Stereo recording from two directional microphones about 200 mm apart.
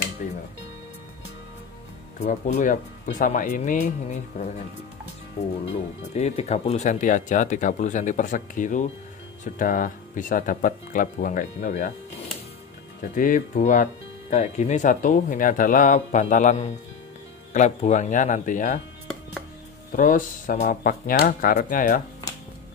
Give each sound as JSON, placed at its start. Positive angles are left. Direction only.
{"t": 0.2, "sound": "music", "side_deg": 40}
{"t": 2.1, "sound": "speech", "side_deg": 35}
{"t": 5.7, "sound": "speech", "side_deg": 35}
{"t": 13.1, "sound": "speech", "side_deg": 40}
{"t": 19.9, "sound": "speech", "side_deg": 40}